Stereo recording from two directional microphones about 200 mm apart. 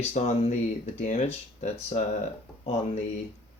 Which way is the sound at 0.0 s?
30° left (ahead or behind).